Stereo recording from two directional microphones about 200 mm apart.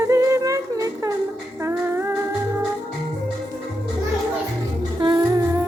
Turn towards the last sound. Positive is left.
turn(degrees=-15)  # may be behind; listen again after turning